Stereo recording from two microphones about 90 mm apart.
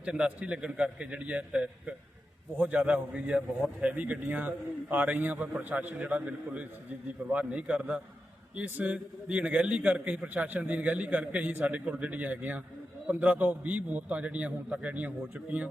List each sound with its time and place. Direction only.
0.0 s a man's voice: 10° right (ahead or behind)